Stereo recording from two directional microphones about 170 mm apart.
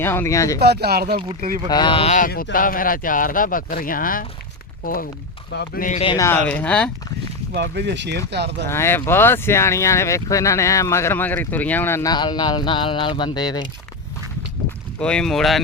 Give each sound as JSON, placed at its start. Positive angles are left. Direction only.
{"t": 0.0, "sound": "speech", "side_deg": 15}
{"t": 0.6, "sound": "speech", "side_deg": -70}
{"t": 1.7, "sound": "speech", "side_deg": 30}
{"t": 2.1, "sound": "speech", "side_deg": 55}
{"t": 5.5, "sound": "speech", "side_deg": 80}
{"t": 6.1, "sound": "speech", "side_deg": 15}
{"t": 7.5, "sound": "speech", "side_deg": -80}
{"t": 8.6, "sound": "speech", "side_deg": 15}
{"t": 12.1, "sound": "speech", "side_deg": 25}
{"t": 14.9, "sound": "speech", "side_deg": 5}